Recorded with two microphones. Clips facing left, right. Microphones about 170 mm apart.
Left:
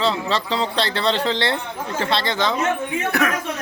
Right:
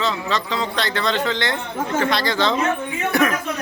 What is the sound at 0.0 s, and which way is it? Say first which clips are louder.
Speech: left 2 dB; 30° left (ahead or behind).